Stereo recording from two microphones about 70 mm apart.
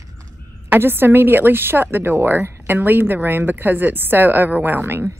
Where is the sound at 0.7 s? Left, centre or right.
Right.